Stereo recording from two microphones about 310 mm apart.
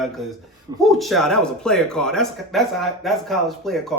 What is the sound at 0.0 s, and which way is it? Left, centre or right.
Speech, centre.